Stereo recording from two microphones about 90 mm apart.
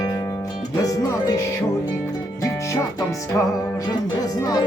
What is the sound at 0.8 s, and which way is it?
Speech, 45° left (ahead or behind).